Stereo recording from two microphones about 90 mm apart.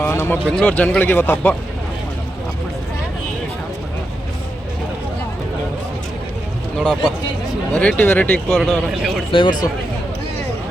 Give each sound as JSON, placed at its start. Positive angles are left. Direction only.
{"t": 0.0, "sound": "a sound", "side_deg": 25}
{"t": 0.6, "sound": "speech", "side_deg": 15}
{"t": 7.7, "sound": "speech", "side_deg": 15}
{"t": 8.4, "sound": "a man's voice", "side_deg": 0}
{"t": 9.3, "sound": "speech", "side_deg": 60}